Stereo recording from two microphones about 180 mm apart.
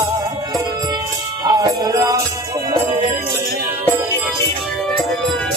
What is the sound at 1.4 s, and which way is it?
Music, 20° right (ahead or behind).